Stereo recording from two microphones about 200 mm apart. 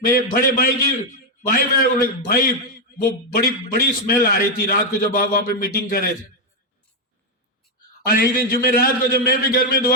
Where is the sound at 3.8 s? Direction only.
45° left (ahead or behind).